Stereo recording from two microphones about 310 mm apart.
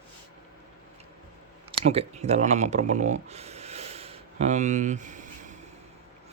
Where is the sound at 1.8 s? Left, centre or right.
Centre.